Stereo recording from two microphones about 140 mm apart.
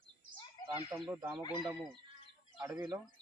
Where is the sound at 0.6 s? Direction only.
30° left (ahead or behind).